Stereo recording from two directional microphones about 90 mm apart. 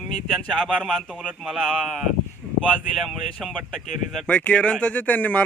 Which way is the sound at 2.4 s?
20° right (ahead or behind).